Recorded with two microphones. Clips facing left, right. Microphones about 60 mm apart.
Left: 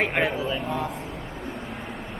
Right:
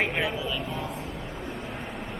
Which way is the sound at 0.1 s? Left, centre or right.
Left.